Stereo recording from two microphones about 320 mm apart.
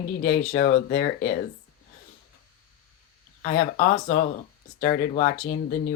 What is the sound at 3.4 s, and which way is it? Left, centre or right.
Speech, left.